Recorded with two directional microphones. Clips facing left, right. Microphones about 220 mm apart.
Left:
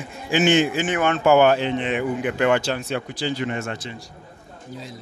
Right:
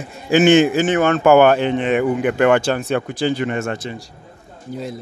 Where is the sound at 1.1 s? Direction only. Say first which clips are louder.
Right 3 dB; 55° right (ahead or behind).